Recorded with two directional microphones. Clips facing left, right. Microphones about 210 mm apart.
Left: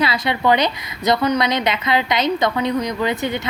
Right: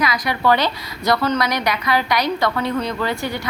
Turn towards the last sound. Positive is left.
turn(degrees=20)  # may be behind; listen again after turning